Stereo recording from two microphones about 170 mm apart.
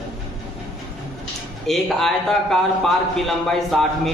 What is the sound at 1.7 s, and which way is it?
A man's voice, centre (ahead or behind).